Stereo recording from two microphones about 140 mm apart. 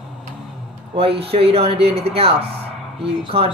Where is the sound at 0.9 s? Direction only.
45° right (ahead or behind).